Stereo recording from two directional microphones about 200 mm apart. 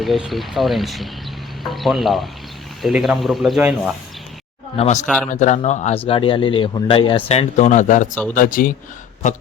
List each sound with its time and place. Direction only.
0.0 s speech: centre (ahead or behind)
4.8 s speech: 35° left (ahead or behind)
5.0 s speech: centre (ahead or behind)
5.3 s speech: 35° left (ahead or behind)
6.1 s speech: 25° left (ahead or behind); by 8.7 s 45° left (ahead or behind)